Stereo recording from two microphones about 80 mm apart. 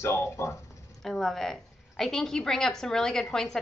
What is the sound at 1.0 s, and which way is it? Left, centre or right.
A woman's voice, centre.